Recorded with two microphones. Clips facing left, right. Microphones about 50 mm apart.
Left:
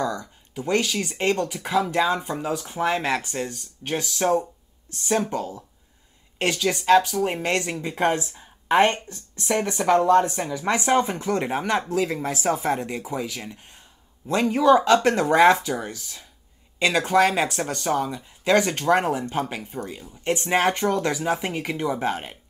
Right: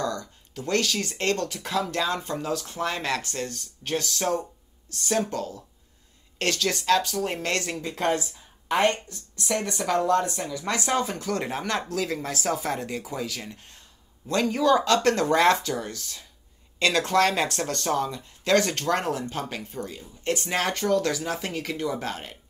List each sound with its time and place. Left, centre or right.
0.0 s speech: centre